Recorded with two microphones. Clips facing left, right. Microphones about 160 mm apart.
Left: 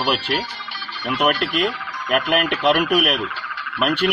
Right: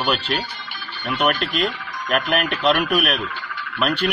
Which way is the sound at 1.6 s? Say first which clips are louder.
Left 1 dB; 10° left (ahead or behind).